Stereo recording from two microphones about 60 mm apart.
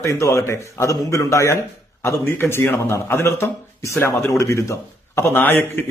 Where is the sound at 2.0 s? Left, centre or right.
Left.